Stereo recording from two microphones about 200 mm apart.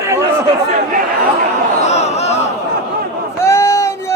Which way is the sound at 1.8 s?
35° left (ahead or behind).